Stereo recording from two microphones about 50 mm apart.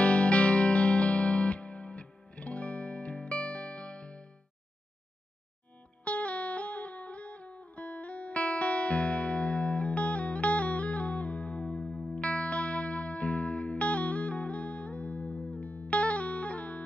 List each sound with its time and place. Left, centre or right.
0.0 s music: left
6.0 s music: left